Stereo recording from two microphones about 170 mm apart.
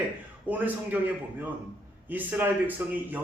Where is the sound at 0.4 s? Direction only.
10° right (ahead or behind).